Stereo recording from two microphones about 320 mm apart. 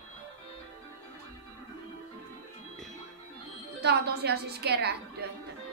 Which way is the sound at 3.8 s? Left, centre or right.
Right.